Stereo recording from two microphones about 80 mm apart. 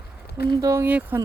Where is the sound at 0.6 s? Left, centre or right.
Right.